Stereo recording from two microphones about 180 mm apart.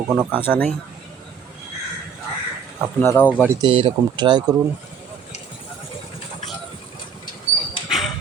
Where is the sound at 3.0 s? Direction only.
10° left (ahead or behind).